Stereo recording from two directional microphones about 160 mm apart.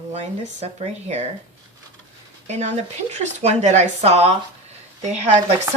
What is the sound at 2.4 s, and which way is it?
Speech, 45° right (ahead or behind).